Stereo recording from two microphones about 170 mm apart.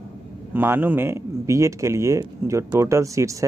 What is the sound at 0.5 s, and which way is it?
Speech, 10° right (ahead or behind).